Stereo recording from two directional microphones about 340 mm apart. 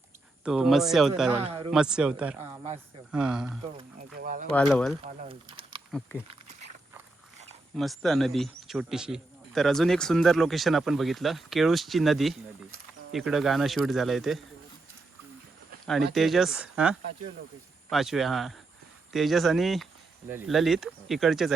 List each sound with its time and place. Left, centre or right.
0.4 s speech: centre
1.4 s speech: centre
1.7 s speech: centre
2.5 s speech: centre
3.1 s speech: centre
3.6 s speech: centre
4.5 s speech: centre
5.0 s speech: right
7.8 s speech: centre
15.9 s speech: centre